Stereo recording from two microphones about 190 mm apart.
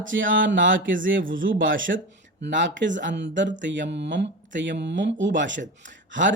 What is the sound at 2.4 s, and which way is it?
Speech, 70° right (ahead or behind).